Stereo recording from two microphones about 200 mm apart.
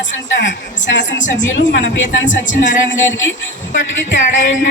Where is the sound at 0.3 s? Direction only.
65° left (ahead or behind).